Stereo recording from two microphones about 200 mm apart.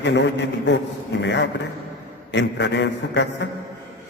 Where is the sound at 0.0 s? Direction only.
60° left (ahead or behind).